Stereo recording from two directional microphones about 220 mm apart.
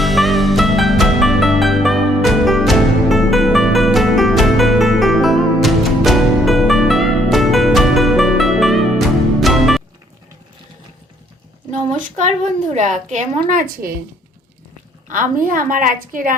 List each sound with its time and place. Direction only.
0.0 s music: centre (ahead or behind)
12.0 s a sound: 35° right (ahead or behind)
12.7 s a woman's voice: 35° right (ahead or behind)
15.1 s a woman's voice: 35° right (ahead or behind)